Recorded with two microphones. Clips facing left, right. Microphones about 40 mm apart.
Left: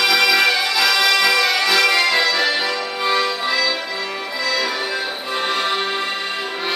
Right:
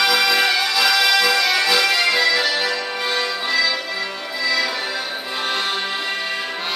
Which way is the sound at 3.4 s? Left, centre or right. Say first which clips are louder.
Even; centre.